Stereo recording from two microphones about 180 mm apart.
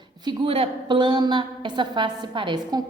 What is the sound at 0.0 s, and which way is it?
A woman's voice, 25° right (ahead or behind).